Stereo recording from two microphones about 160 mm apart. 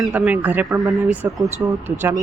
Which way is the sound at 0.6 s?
20° right (ahead or behind).